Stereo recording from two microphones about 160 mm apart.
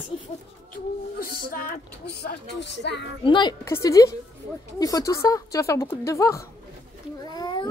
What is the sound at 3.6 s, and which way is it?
A woman's voice, 20° left (ahead or behind).